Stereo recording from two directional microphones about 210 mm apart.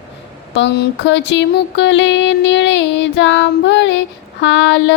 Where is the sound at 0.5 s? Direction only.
55° left (ahead or behind).